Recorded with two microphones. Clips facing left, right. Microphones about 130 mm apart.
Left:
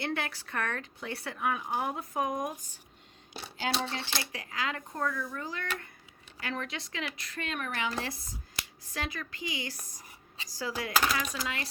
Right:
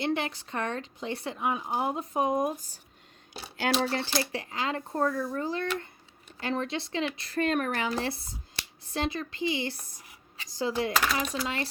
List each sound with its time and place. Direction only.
0.0 s speech: 20° right (ahead or behind)
3.6 s speech: 55° right (ahead or behind)
4.0 s speech: 35° right (ahead or behind)
7.9 s speech: 30° right (ahead or behind)